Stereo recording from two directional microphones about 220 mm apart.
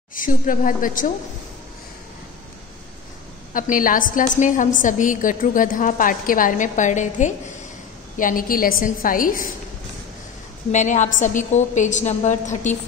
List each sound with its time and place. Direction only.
0.1 s a woman's voice: 40° left (ahead or behind)
3.5 s a woman's voice: 40° left (ahead or behind)
10.7 s a woman's voice: 35° left (ahead or behind)